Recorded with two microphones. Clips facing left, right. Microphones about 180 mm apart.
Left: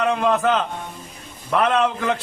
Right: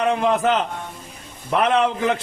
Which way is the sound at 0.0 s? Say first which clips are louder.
Even; 15° right (ahead or behind).